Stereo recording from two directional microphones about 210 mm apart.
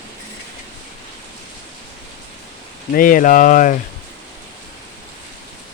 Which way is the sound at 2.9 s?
40° left (ahead or behind).